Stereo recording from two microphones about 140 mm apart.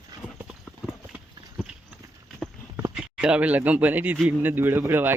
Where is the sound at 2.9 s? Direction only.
5° right (ahead or behind).